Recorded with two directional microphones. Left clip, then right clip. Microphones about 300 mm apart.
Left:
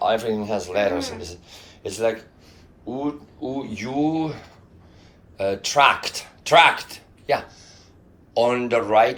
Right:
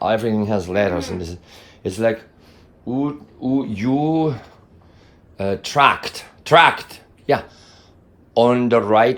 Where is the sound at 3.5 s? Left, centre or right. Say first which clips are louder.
Right 5 dB; right.